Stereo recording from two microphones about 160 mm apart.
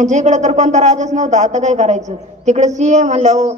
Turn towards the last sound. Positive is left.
turn(degrees=-45)  # may be behind; listen again after turning